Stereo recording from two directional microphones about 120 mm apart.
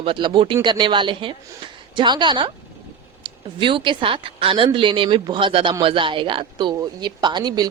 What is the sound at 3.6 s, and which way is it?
Speech, 45° right (ahead or behind).